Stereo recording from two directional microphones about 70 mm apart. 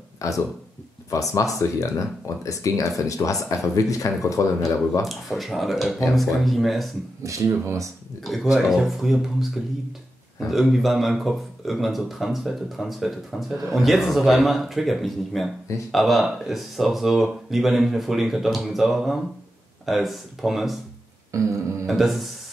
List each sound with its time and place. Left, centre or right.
0.2 s speech: left
5.0 s speech: centre
7.2 s speech: right
8.2 s speech: centre
10.5 s speech: centre
21.3 s speech: right
21.8 s speech: centre